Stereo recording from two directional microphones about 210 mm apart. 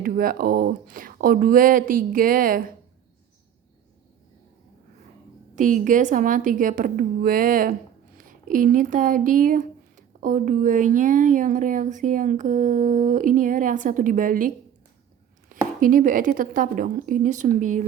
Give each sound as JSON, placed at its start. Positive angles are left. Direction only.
{"t": 0.0, "sound": "speech", "side_deg": -45}
{"t": 5.5, "sound": "speech", "side_deg": -40}